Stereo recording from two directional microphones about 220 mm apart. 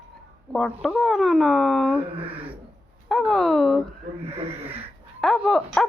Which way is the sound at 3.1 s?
Centre (ahead or behind).